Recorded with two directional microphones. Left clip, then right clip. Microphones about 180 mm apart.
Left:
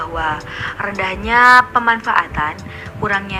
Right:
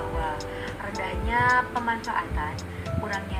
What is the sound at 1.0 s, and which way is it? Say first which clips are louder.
Speech: left 13 dB; 55° left (ahead or behind).